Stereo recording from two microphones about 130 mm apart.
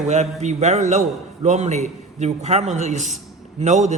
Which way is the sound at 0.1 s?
60° right (ahead or behind).